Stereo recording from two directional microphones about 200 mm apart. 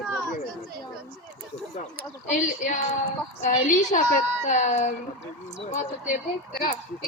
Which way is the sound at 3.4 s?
40° left (ahead or behind).